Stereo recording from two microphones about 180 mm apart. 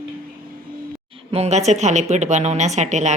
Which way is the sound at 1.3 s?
35° right (ahead or behind).